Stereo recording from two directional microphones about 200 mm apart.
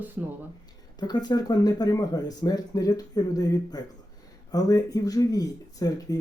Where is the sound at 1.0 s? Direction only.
20° left (ahead or behind).